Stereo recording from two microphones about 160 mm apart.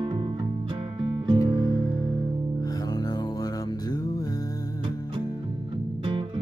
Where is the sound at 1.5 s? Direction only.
20° left (ahead or behind).